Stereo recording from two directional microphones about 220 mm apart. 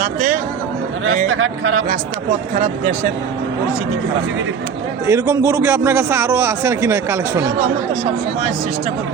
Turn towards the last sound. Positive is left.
turn(degrees=-10)  # may be behind; listen again after turning